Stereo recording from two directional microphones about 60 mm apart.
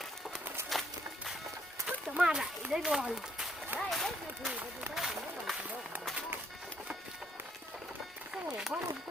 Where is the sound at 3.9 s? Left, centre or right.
Centre.